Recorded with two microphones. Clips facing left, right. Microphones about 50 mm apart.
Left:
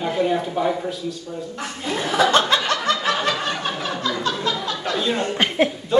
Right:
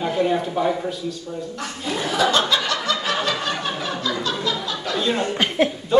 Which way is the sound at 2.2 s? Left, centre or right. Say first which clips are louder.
Left 2 dB; left.